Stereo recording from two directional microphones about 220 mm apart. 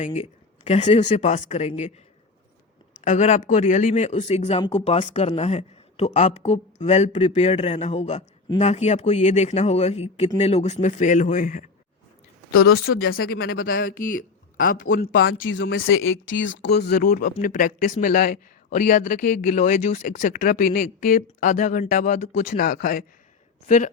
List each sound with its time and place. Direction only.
0.0 s speech: 30° left (ahead or behind)
3.0 s speech: 35° left (ahead or behind)
12.5 s speech: 75° left (ahead or behind)
13.6 s speech: 40° left (ahead or behind)
15.4 s a woman's voice: 60° left (ahead or behind); by 23.9 s 35° left (ahead or behind)